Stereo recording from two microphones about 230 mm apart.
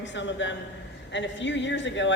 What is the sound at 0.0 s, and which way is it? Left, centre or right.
A man's voice, left.